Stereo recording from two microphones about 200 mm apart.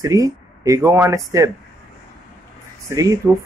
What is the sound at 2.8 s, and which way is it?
Speech, 15° right (ahead or behind).